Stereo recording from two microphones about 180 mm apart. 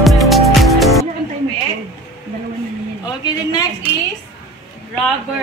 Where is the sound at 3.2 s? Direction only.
20° left (ahead or behind).